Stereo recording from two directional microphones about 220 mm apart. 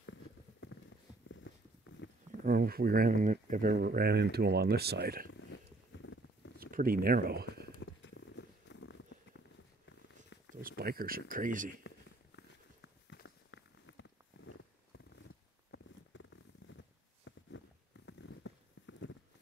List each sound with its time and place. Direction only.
2.4 s speech: 45° right (ahead or behind)
5.9 s rodents: 60° left (ahead or behind)
6.6 s speech: 40° right (ahead or behind)
7.8 s a sound: 60° left (ahead or behind)
9.8 s purr: 55° left (ahead or behind)
10.8 s speech: 45° right (ahead or behind)
12.4 s walk: 55° left (ahead or behind)
15.2 s zipper: 60° left (ahead or behind)